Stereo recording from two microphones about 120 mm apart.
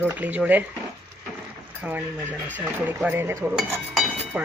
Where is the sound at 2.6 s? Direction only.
15° right (ahead or behind).